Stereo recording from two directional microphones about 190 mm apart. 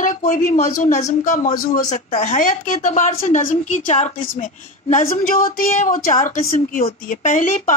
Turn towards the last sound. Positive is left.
turn(degrees=45)  # may be behind; listen again after turning